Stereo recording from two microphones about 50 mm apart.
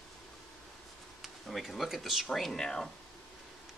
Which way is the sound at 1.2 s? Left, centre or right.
Centre.